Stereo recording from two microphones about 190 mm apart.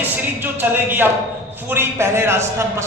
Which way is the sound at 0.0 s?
10° right (ahead or behind).